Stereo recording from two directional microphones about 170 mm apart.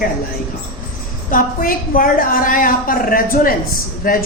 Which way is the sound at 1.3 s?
55° left (ahead or behind).